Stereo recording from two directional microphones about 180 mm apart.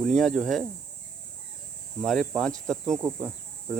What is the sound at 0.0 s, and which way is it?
Cricket, centre (ahead or behind).